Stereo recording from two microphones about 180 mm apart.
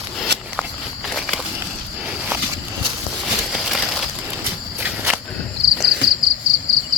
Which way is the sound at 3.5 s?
Centre (ahead or behind).